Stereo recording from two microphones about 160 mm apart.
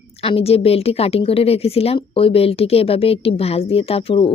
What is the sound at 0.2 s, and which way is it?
A woman's voice, 35° left (ahead or behind).